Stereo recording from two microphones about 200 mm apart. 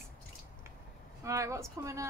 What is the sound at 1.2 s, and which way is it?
Speech, 15° right (ahead or behind).